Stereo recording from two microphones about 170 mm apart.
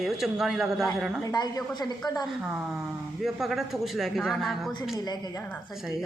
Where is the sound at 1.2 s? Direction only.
25° left (ahead or behind).